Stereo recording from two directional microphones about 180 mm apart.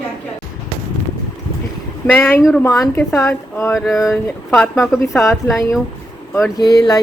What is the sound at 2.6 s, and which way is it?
Speech, 20° left (ahead or behind).